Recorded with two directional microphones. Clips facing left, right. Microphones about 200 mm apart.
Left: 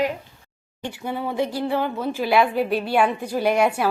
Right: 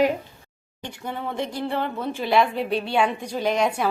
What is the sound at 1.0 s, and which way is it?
A woman's voice, 5° left (ahead or behind).